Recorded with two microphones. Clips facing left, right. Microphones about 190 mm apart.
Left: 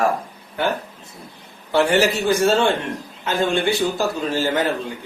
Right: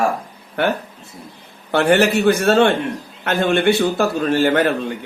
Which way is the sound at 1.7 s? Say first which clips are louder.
Right 3 dB; 60° right (ahead or behind).